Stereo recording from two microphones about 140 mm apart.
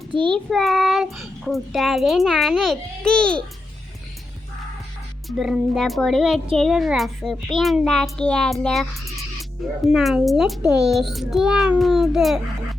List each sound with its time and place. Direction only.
0.2 s child singing: 5° left (ahead or behind)
5.4 s child singing: 5° right (ahead or behind)
8.6 s speech: 5° left (ahead or behind)
9.9 s child singing: centre (ahead or behind)